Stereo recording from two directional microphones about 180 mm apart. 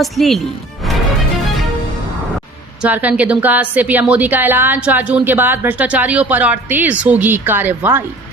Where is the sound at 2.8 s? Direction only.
10° right (ahead or behind).